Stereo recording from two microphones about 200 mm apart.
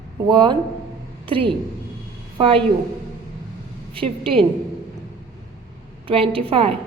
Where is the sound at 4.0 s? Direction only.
25° right (ahead or behind).